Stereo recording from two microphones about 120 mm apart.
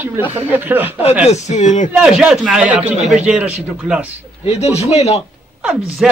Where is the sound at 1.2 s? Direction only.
70° left (ahead or behind); by 1.9 s 90° left.